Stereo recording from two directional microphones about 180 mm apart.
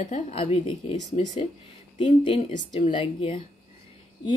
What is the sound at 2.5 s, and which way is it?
Speech, 45° left (ahead or behind).